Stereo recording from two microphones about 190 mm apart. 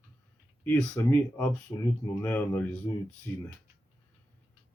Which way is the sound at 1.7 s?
20° left (ahead or behind).